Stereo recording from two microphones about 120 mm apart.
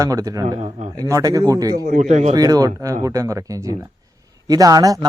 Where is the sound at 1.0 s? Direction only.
30° right (ahead or behind).